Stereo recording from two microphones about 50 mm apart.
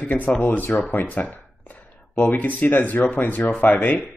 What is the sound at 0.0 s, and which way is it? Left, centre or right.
Speech, left.